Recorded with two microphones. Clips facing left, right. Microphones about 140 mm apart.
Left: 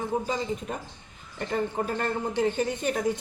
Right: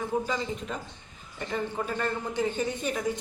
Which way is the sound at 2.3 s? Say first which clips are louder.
Left 3 dB; 60° left (ahead or behind).